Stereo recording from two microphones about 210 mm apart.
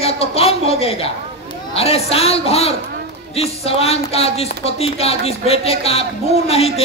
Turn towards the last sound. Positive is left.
turn(degrees=30)  # may be behind; listen again after turning